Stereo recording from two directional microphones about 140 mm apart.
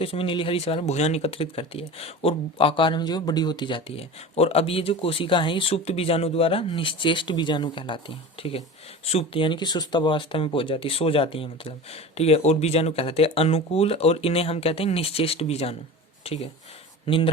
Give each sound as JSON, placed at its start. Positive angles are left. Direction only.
{"t": 0.0, "sound": "speech", "side_deg": 40}